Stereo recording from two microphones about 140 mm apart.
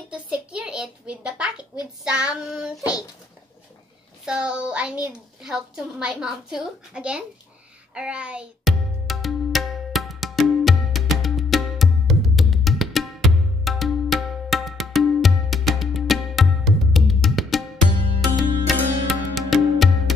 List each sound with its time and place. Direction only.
0.1 s a child's voice: 10° right (ahead or behind)
2.8 s a child's voice: 25° left (ahead or behind)
4.3 s a woman's voice: 5° right (ahead or behind)
7.9 s music: 10° right (ahead or behind)